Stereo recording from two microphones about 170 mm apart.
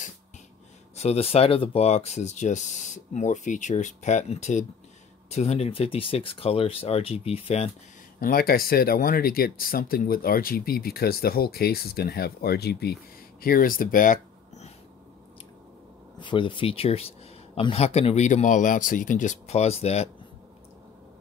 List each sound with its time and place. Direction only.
0.9 s speech: 40° left (ahead or behind)
8.2 s speech: 60° left (ahead or behind)
13.4 s speech: 60° left (ahead or behind)
16.2 s speech: 30° left (ahead or behind)